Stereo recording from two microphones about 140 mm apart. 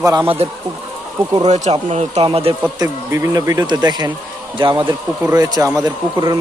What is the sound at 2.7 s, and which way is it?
Speech, 25° right (ahead or behind).